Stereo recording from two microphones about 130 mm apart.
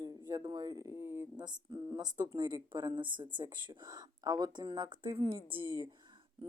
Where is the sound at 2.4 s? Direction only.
35° right (ahead or behind).